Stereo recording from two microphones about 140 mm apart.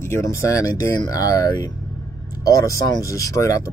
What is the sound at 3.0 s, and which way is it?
Speech, 25° left (ahead or behind).